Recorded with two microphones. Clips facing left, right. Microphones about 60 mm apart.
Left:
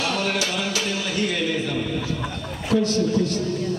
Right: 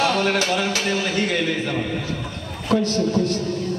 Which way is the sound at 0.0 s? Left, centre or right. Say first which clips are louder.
Right 4 dB; right.